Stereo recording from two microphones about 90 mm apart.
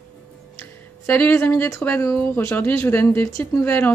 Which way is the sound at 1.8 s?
25° left (ahead or behind).